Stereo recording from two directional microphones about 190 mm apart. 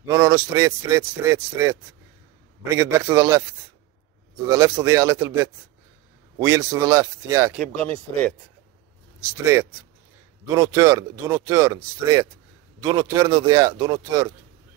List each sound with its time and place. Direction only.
0.0 s a man's voice: 15° right (ahead or behind)
4.5 s a man's voice: 15° right (ahead or behind)
7.5 s speech: 5° left (ahead or behind)
9.4 s a man's voice: 15° right (ahead or behind)